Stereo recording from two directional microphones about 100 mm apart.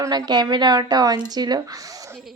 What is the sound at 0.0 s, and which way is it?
Speech, 45° right (ahead or behind).